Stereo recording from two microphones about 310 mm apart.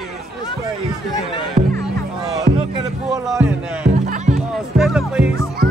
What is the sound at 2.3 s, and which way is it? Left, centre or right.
Music, centre.